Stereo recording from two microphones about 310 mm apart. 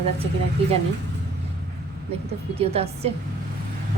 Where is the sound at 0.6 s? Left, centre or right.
Centre.